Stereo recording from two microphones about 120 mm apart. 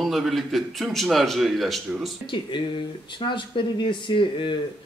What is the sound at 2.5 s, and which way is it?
Speech, 40° left (ahead or behind).